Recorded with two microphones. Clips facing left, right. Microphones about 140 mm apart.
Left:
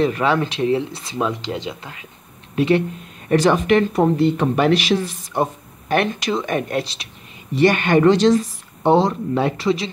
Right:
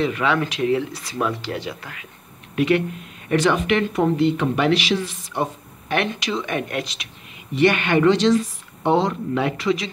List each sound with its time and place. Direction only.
0.0 s speech: 35° left (ahead or behind)